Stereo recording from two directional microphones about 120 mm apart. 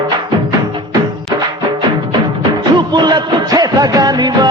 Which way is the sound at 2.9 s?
35° right (ahead or behind).